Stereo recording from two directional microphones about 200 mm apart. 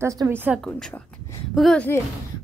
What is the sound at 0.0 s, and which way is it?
Speech, 15° right (ahead or behind).